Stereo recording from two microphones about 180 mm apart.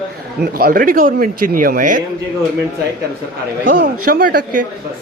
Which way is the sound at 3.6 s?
55° right (ahead or behind).